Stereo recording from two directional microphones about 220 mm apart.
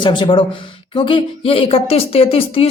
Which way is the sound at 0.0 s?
20° left (ahead or behind).